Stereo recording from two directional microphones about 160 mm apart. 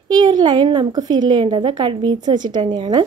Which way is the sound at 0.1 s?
25° right (ahead or behind).